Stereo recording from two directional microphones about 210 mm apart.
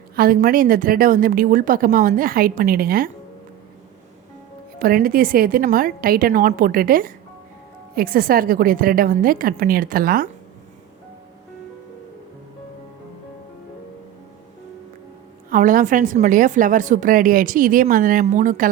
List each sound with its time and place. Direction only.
0.2 s a woman's voice: 45° right (ahead or behind)
4.8 s a woman's voice: 45° right (ahead or behind)
15.4 s a woman's voice: 40° right (ahead or behind)